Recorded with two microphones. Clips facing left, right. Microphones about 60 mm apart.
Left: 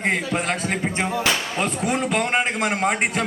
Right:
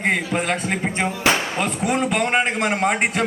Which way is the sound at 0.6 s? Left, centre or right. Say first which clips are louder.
Right 1 dB; right.